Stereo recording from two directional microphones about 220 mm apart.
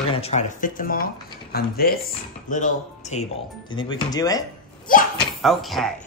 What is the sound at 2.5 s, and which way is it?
Speech, 35° left (ahead or behind).